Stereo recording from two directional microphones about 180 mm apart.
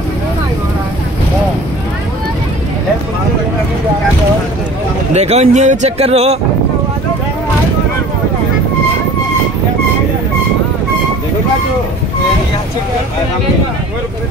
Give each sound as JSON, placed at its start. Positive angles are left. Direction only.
{"t": 5.1, "sound": "speech", "side_deg": -35}